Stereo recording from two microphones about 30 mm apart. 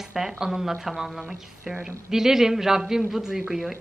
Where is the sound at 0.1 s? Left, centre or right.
Centre.